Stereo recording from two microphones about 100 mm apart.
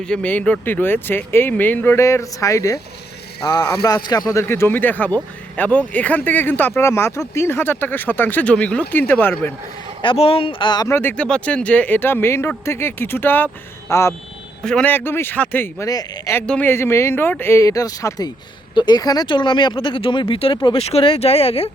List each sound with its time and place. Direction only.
0.0 s speech: 10° left (ahead or behind); by 2.8 s 35° left (ahead or behind)
3.4 s speech: 45° left (ahead or behind); by 9.5 s 20° left (ahead or behind)
10.0 s speech: 60° left (ahead or behind)
10.8 s speech: 25° left (ahead or behind)
11.2 s speech: 10° left (ahead or behind); by 14.0 s 30° left (ahead or behind)
14.6 s speech: 10° left (ahead or behind)
14.9 s speech: 20° left (ahead or behind)
15.9 s speech: 40° left (ahead or behind)
16.5 s speech: 20° left (ahead or behind); by 18.3 s 35° left (ahead or behind)
18.7 s speech: 45° left (ahead or behind)
20.7 s speech: 80° left